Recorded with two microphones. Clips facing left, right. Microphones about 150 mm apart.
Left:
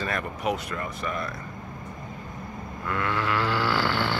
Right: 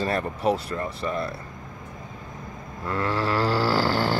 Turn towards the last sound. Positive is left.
turn(degrees=-40)  # may be behind; listen again after turning